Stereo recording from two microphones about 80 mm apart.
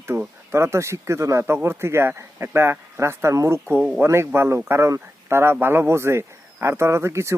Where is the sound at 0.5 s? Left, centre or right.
Right.